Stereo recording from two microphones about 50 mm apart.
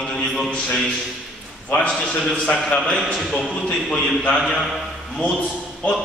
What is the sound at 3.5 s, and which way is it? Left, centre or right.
Speech, centre.